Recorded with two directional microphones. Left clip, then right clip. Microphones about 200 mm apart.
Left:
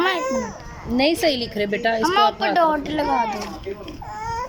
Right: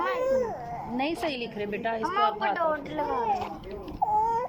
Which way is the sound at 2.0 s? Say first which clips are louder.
Left 7 dB; 50° left (ahead or behind).